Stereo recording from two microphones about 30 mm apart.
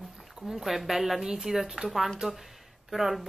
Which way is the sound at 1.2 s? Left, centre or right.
Right.